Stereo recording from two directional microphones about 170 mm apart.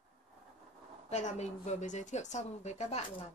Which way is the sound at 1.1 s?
40° left (ahead or behind).